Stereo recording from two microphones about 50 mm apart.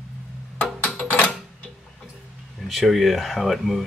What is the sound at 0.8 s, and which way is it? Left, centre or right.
Music, left.